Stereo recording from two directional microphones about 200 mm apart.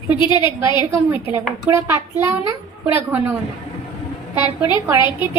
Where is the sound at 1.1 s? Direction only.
10° right (ahead or behind).